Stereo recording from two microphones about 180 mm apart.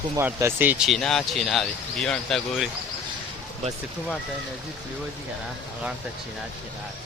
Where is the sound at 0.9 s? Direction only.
Centre (ahead or behind).